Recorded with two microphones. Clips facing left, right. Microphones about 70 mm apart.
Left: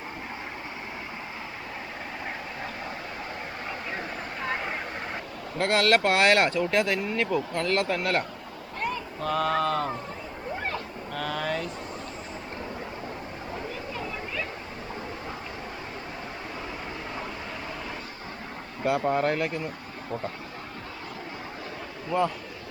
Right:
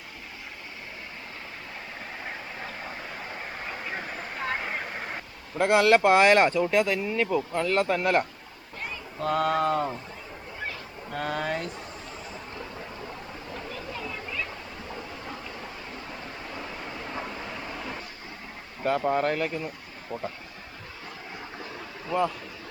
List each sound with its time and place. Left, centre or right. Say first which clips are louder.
3.9 s vehicle: left 1 dB; centre
5.5 s speech: right 3 dB; centre
9.2 s speech: right 1 dB; right
11.1 s speech: right 1 dB; right
17.2 s vehicle: even; centre
18.8 s speech: even; centre
22.1 s speech: left 1 dB; centre